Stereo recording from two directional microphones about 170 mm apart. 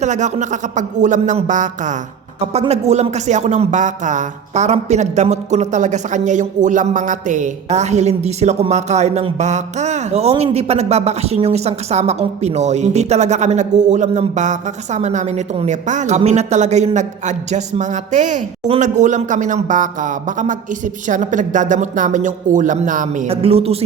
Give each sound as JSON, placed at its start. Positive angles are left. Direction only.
{"t": 0.0, "sound": "speech", "side_deg": -45}
{"t": 23.3, "sound": "a man's voice", "side_deg": -35}